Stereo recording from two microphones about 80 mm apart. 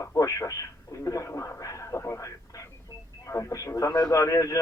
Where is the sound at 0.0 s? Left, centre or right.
Left.